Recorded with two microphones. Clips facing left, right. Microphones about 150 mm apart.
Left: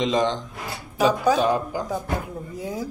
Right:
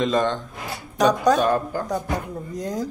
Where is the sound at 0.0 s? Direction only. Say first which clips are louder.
Right 1 dB; 15° left (ahead or behind).